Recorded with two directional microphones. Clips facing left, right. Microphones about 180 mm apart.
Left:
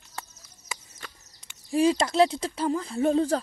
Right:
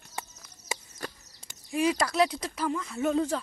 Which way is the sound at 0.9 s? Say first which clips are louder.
Right 7 dB; 40° right (ahead or behind).